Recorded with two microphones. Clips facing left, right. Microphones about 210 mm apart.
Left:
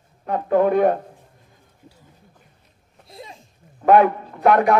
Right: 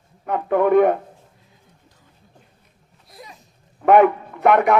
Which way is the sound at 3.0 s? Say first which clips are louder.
Left 3 dB; 25° left (ahead or behind).